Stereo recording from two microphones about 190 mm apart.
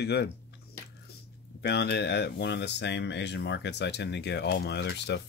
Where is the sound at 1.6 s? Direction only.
60° left (ahead or behind).